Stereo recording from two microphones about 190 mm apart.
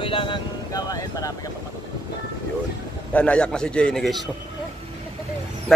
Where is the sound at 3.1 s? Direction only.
5° left (ahead or behind).